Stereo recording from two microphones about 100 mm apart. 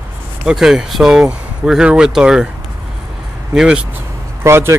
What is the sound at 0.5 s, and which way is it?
Speech, 5° right (ahead or behind).